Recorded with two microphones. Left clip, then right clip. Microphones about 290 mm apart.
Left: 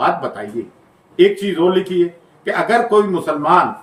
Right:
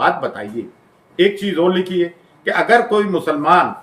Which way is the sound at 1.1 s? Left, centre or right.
Centre.